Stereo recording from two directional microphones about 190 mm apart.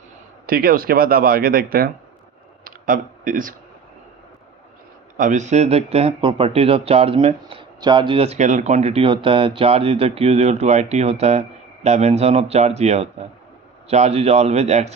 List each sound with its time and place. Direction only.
0.4 s speech: 50° right (ahead or behind)
2.6 s a sound: 45° right (ahead or behind)
5.1 s speech: 45° right (ahead or behind)